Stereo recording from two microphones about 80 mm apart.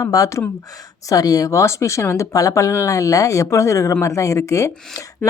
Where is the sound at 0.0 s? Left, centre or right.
Left.